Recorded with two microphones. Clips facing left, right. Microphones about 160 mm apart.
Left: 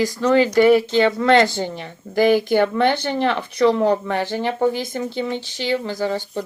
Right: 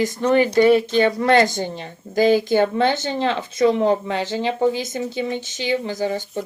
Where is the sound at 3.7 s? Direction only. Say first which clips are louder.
Left 1 dB; 20° right (ahead or behind).